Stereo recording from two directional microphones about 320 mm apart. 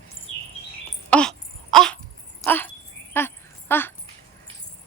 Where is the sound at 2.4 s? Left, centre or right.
Centre.